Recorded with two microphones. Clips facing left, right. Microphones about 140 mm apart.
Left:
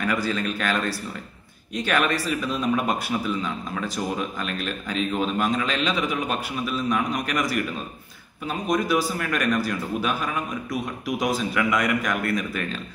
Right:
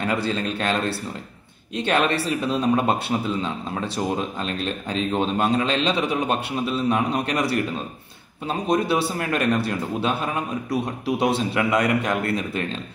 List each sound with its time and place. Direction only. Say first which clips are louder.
0.0 s speech: right 1 dB; 30° right (ahead or behind)